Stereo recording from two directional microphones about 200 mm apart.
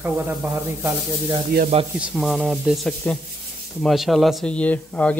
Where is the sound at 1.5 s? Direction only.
50° right (ahead or behind).